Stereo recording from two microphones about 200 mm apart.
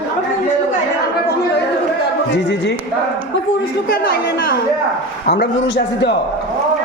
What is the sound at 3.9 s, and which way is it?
A man's voice, 50° left (ahead or behind).